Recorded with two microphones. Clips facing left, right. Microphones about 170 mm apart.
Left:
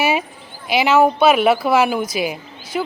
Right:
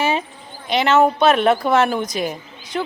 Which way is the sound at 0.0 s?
10° left (ahead or behind).